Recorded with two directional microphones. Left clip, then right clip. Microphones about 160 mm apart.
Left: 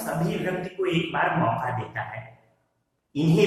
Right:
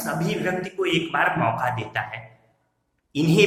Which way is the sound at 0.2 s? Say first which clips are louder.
Right 3 dB; 15° right (ahead or behind).